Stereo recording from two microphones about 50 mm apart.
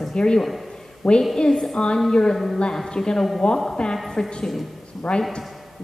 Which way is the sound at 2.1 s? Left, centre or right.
Centre.